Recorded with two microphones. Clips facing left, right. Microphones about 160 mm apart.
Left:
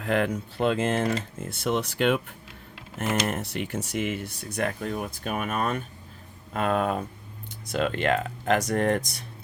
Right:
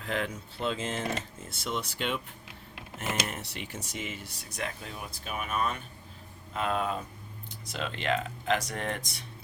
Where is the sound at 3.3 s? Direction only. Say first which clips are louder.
Left 9 dB; 50° left (ahead or behind).